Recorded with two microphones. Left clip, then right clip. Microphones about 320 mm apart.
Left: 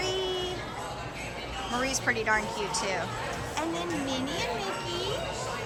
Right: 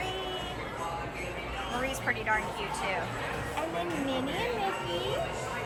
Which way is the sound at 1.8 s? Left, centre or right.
Centre.